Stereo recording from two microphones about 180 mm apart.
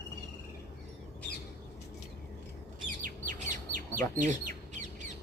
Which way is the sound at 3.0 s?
45° right (ahead or behind).